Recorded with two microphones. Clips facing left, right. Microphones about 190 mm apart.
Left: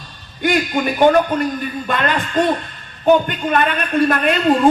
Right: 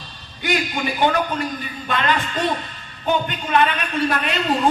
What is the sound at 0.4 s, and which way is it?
Speech, 50° left (ahead or behind).